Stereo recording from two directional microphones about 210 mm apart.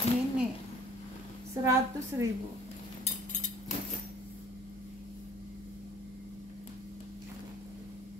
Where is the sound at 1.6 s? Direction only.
15° right (ahead or behind).